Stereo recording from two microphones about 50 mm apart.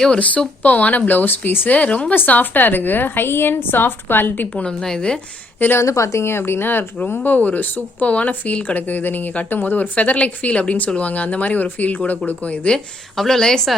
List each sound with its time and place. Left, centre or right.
0.2 s a woman's voice: left
4.5 s speech: centre
5.5 s a woman's voice: left
5.8 s speech: left
6.2 s a woman's voice: left
13.1 s speech: centre